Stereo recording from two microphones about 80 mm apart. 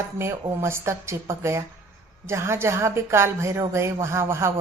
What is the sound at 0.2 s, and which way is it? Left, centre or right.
Speech, right.